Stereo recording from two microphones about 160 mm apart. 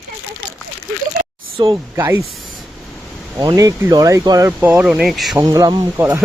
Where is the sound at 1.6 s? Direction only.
20° right (ahead or behind).